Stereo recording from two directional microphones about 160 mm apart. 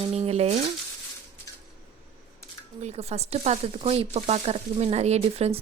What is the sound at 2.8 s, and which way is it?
A woman's voice, 40° right (ahead or behind).